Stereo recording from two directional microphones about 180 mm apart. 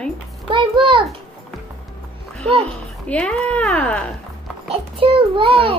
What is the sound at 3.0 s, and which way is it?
Speech, 5° left (ahead or behind).